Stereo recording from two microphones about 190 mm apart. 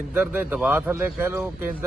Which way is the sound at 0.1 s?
5° right (ahead or behind).